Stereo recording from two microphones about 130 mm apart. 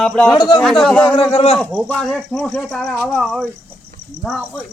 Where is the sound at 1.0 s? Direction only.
45° left (ahead or behind).